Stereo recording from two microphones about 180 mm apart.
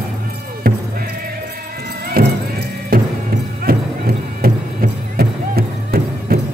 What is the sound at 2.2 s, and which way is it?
Music, 55° right (ahead or behind).